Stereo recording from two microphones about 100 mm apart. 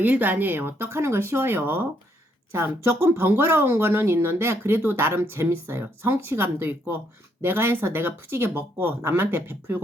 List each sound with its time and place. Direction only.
0.0 s speech: 15° right (ahead or behind)